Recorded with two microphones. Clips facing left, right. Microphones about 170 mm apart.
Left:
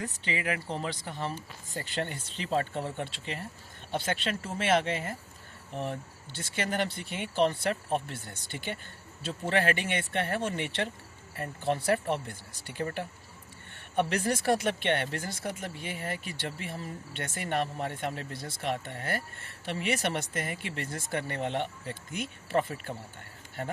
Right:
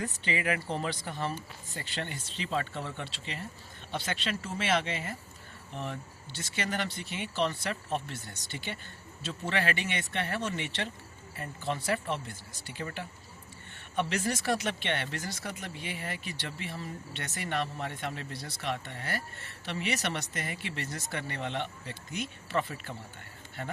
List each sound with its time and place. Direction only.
0.3 s speech: 25° left (ahead or behind)
1.7 s speech: 45° left (ahead or behind)